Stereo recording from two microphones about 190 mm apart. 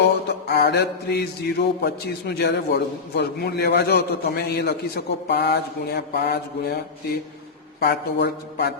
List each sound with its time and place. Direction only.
0.0 s mantra: 60° left (ahead or behind)
1.8 s a man's voice: 60° left (ahead or behind)
7.8 s a man's voice: 60° left (ahead or behind)